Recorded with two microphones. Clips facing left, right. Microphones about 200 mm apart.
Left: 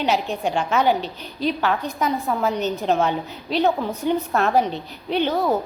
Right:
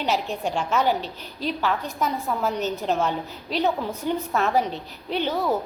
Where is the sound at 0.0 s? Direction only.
65° left (ahead or behind).